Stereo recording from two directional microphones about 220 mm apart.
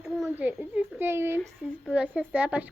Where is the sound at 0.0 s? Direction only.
Centre (ahead or behind).